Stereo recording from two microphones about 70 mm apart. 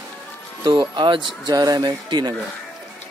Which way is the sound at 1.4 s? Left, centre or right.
Right.